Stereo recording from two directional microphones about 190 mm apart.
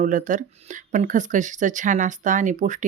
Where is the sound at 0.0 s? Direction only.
40° right (ahead or behind).